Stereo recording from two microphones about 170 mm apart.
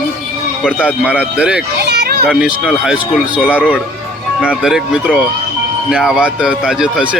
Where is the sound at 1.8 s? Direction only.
70° right (ahead or behind).